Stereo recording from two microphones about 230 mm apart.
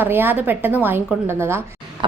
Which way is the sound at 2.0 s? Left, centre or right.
Right.